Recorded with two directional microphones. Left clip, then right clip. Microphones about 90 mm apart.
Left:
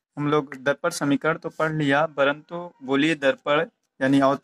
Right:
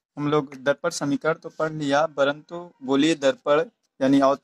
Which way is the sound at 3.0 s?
40° right (ahead or behind).